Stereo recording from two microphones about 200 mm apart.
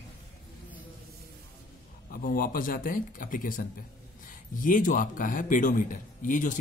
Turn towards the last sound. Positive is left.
turn(degrees=40)  # may be behind; listen again after turning